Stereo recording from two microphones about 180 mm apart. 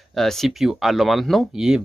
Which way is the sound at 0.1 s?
Centre (ahead or behind).